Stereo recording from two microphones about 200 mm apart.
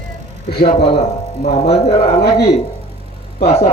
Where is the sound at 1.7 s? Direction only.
30° left (ahead or behind).